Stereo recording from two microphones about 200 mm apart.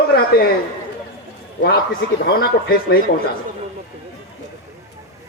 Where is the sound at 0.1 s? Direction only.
55° left (ahead or behind).